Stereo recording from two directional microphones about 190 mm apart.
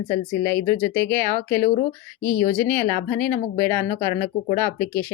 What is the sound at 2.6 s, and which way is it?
Speech, 10° left (ahead or behind).